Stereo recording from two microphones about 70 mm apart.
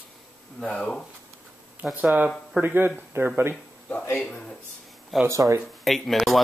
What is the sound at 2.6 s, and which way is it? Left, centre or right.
Speech, right.